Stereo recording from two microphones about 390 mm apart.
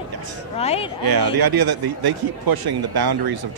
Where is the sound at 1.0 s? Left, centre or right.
Right.